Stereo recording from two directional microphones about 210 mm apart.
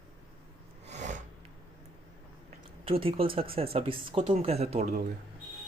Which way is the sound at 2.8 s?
25° right (ahead or behind).